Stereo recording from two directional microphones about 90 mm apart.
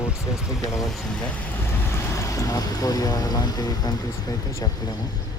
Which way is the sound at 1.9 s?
35° left (ahead or behind).